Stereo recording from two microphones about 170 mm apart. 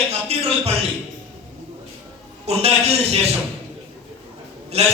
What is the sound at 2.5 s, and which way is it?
Speech, 35° right (ahead or behind).